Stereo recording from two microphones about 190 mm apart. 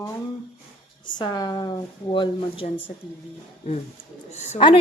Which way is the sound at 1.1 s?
20° left (ahead or behind).